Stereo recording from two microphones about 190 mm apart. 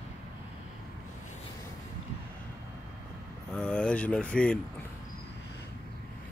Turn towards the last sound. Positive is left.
turn(degrees=5)  # may be behind; listen again after turning